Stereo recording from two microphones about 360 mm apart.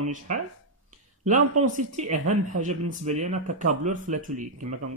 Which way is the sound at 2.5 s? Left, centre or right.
Centre.